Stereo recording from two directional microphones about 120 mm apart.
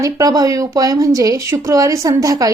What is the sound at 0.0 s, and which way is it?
Speech, 30° right (ahead or behind).